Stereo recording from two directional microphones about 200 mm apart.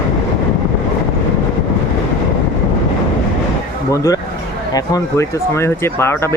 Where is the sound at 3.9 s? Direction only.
15° left (ahead or behind).